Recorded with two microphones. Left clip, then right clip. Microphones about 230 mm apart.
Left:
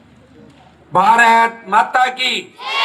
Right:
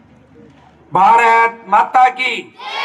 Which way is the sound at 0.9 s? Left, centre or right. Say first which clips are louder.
Right 1 dB; right.